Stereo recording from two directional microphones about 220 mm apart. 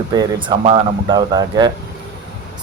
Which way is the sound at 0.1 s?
20° right (ahead or behind).